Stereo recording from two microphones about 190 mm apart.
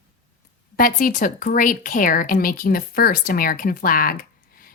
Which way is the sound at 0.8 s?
45° left (ahead or behind).